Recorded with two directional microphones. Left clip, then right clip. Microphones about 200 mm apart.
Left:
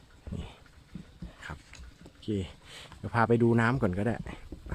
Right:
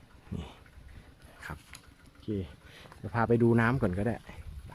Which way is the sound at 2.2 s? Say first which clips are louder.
Left 2 dB; 15° left (ahead or behind).